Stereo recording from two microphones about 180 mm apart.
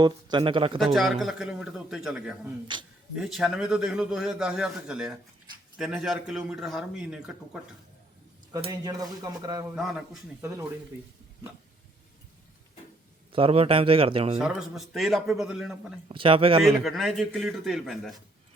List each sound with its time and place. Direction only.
0.0 s speech: 25° right (ahead or behind)
0.9 s a man's voice: centre (ahead or behind)
2.7 s speech: 25° right (ahead or behind)
3.2 s a man's voice: centre (ahead or behind)
8.6 s speech: 20° right (ahead or behind)
9.7 s a man's voice: 5° right (ahead or behind)
10.4 s speech: 15° right (ahead or behind)
13.3 s a man's voice: 30° right (ahead or behind)
14.3 s a man's voice: centre (ahead or behind)
16.0 s speech: 30° right (ahead or behind)
16.6 s a man's voice: centre (ahead or behind)